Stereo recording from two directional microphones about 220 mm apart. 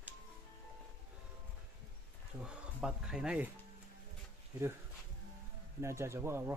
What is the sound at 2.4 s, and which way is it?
Speech, 5° right (ahead or behind).